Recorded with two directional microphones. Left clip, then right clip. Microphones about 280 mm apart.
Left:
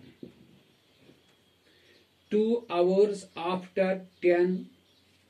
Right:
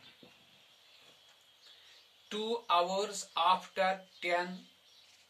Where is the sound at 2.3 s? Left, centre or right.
Right.